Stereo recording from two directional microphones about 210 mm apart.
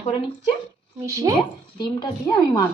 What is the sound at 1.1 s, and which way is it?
Speech, 15° right (ahead or behind).